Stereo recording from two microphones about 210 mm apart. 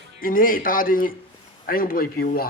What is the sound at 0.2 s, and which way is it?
A man's voice, 40° left (ahead or behind).